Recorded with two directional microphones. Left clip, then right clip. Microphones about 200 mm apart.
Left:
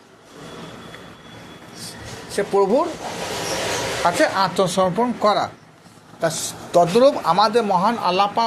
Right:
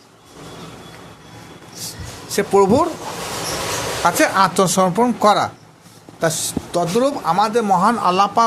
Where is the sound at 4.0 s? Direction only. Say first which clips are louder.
Right 4 dB; 25° right (ahead or behind).